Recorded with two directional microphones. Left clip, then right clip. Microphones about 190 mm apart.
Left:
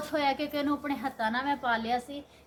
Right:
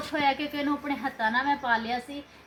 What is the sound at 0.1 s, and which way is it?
A woman's voice, 15° left (ahead or behind).